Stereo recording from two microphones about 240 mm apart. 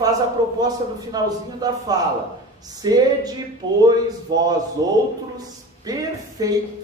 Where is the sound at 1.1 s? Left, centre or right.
Centre.